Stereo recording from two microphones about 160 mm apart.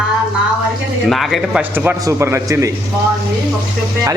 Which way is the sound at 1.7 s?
10° right (ahead or behind).